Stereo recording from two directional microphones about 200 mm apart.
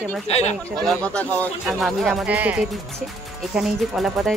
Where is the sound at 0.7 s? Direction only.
Centre (ahead or behind).